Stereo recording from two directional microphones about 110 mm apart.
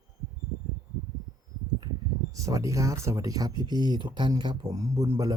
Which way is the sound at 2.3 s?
30° right (ahead or behind).